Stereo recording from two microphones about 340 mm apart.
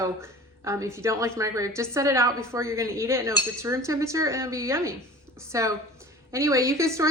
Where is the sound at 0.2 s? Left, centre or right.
Centre.